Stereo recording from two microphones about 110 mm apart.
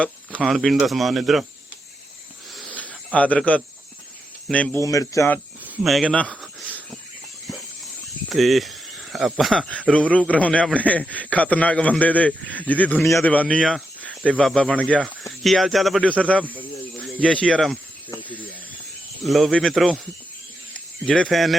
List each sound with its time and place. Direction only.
0.0 s a sound: 10° left (ahead or behind)
0.4 s speech: centre (ahead or behind)
2.9 s a man's voice: 10° left (ahead or behind)
4.8 s a man's voice: 30° left (ahead or behind)
5.8 s speech: centre (ahead or behind)
6.1 s a sound: 10° left (ahead or behind)
8.3 s cricket: centre (ahead or behind)
9.3 s a man's voice: 5° left (ahead or behind)
15.2 s speech: centre (ahead or behind)
16.0 s a man's voice: 10° left (ahead or behind)
19.2 s speech: centre (ahead or behind)
21.0 s speech: 5° left (ahead or behind)